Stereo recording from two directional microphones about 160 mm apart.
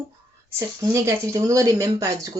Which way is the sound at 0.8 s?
20° right (ahead or behind).